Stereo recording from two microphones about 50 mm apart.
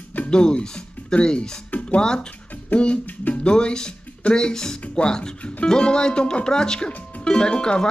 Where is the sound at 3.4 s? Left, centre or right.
Centre.